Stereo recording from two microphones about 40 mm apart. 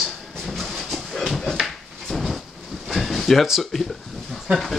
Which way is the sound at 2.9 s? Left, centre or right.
Centre.